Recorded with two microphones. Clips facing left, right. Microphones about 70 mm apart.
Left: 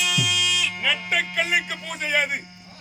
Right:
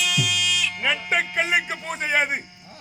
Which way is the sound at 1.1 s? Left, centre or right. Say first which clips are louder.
Right 2 dB; right.